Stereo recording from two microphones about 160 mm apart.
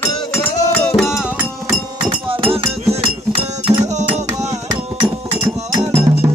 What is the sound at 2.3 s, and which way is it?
Chink, 35° right (ahead or behind).